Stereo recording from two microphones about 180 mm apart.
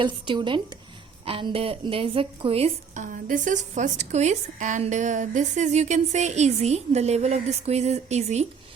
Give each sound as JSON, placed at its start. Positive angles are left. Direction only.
{"t": 0.0, "sound": "a woman's voice", "side_deg": -25}